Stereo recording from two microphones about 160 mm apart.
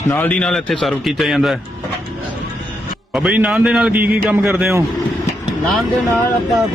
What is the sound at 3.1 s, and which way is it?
A man's voice, 10° right (ahead or behind).